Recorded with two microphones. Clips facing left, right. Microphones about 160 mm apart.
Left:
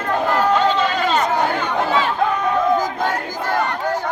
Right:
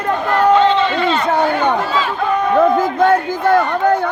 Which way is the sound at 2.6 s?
60° right (ahead or behind).